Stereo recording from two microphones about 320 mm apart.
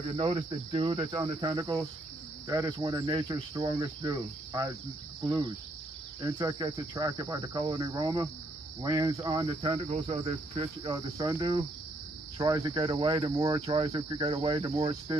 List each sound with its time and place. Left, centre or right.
0.2 s cricket: centre